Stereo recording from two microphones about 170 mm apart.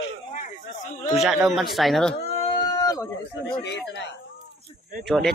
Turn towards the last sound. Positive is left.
turn(degrees=0)  # may be behind; listen again after turning